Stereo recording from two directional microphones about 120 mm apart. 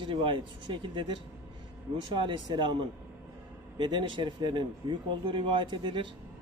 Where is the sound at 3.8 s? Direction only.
40° right (ahead or behind).